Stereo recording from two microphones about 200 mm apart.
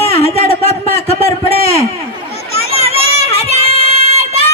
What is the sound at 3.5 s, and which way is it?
Child singing, 30° left (ahead or behind).